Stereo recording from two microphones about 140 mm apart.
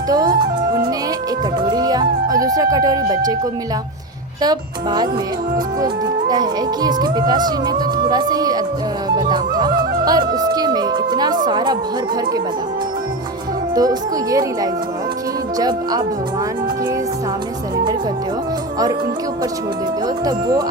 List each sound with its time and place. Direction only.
0.1 s music: 30° right (ahead or behind)
4.4 s speech: 30° right (ahead or behind)
9.0 s music: 30° right (ahead or behind)
13.7 s speech: 25° right (ahead or behind)
20.2 s speech: 25° right (ahead or behind)